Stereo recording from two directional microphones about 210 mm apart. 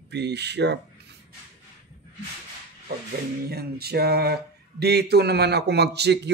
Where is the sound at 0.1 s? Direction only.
55° right (ahead or behind).